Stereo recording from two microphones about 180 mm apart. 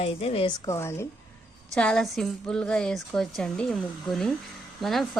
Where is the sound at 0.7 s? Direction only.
15° left (ahead or behind).